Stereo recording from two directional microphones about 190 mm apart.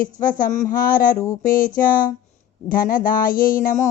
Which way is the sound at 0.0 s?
45° left (ahead or behind).